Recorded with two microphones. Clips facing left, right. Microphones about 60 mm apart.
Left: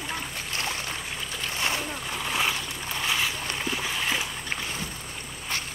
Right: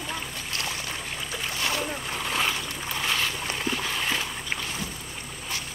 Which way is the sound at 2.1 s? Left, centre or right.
Centre.